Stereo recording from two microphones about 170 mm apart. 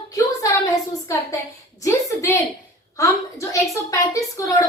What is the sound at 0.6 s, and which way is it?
A woman's voice, 20° left (ahead or behind).